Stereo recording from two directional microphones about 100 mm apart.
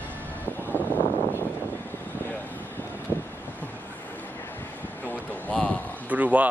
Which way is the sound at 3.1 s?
20° left (ahead or behind).